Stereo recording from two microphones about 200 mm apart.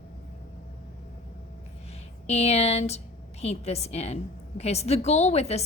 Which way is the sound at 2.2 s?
30° left (ahead or behind).